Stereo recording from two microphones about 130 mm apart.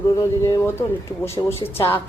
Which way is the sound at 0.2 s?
30° left (ahead or behind).